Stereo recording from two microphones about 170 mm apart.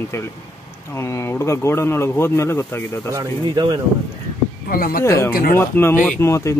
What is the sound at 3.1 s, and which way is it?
Speech, 25° right (ahead or behind).